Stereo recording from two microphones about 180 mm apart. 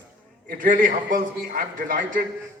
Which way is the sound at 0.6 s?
45° right (ahead or behind).